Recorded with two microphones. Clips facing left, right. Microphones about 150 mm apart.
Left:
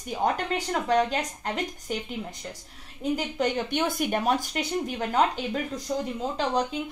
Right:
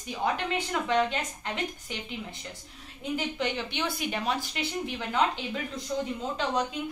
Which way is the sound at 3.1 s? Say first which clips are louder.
Left 3 dB; 45° left (ahead or behind).